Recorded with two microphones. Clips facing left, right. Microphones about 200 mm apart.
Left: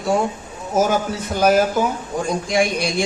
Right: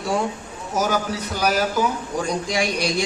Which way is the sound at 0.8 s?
50° left (ahead or behind).